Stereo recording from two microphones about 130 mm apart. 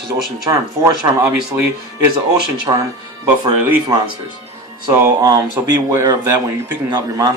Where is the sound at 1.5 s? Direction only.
20° right (ahead or behind).